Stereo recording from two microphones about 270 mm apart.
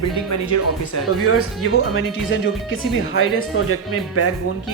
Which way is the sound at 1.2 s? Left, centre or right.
Left.